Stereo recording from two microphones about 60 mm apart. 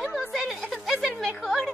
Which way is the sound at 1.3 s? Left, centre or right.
Centre.